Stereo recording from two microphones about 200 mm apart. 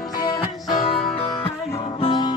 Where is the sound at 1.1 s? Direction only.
30° left (ahead or behind).